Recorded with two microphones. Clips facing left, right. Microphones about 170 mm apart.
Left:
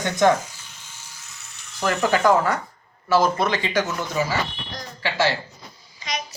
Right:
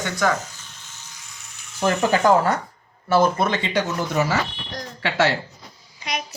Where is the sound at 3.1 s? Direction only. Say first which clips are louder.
Right 1 dB; 55° right (ahead or behind).